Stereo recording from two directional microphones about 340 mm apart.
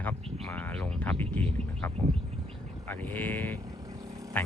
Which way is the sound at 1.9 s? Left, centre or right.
Centre.